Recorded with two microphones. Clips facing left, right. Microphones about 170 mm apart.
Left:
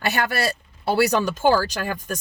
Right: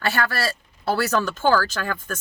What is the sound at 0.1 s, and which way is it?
Speech, 20° left (ahead or behind).